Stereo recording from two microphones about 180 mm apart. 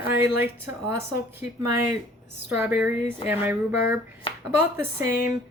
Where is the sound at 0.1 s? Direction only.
10° right (ahead or behind).